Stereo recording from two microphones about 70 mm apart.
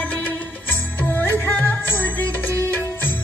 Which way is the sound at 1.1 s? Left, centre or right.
Left.